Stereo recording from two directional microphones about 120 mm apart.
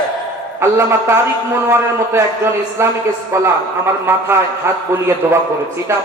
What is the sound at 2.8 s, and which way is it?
A man's voice, 20° right (ahead or behind).